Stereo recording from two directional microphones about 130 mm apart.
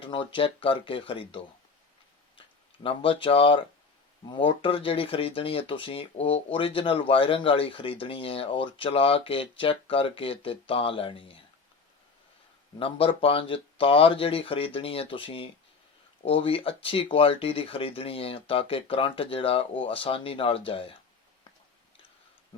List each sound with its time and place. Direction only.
0.0 s speech: 40° left (ahead or behind)
2.8 s speech: 45° left (ahead or behind)
12.8 s speech: 45° left (ahead or behind)